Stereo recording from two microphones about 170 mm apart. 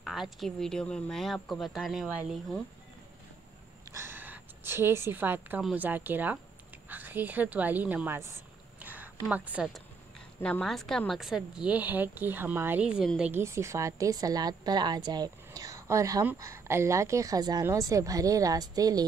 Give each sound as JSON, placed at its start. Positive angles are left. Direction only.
{"t": 0.0, "sound": "a woman's voice", "side_deg": 0}
{"t": 3.9, "sound": "a woman's voice", "side_deg": -15}
{"t": 8.8, "sound": "a sound", "side_deg": -10}
{"t": 10.4, "sound": "a woman's voice", "side_deg": 5}